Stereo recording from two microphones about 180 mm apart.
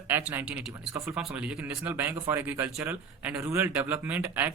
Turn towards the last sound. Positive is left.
turn(degrees=-10)  # may be behind; listen again after turning